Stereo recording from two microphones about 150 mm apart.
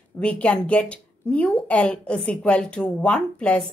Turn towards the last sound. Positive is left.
turn(degrees=5)  # may be behind; listen again after turning